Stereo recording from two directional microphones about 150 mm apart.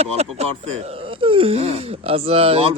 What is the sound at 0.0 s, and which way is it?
Speech, 45° right (ahead or behind).